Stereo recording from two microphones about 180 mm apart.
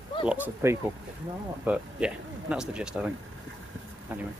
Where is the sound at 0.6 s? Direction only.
15° right (ahead or behind).